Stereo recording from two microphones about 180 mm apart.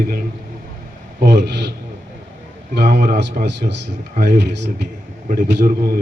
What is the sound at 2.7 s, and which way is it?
A man's voice, 65° right (ahead or behind).